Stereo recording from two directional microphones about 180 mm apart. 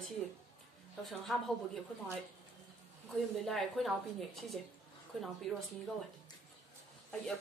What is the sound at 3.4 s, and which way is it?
A woman's voice, centre (ahead or behind).